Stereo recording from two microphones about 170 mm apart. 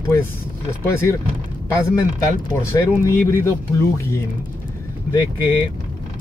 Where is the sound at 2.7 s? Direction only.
15° left (ahead or behind).